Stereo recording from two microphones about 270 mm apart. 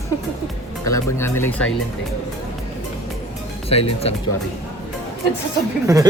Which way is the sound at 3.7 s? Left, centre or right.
Left.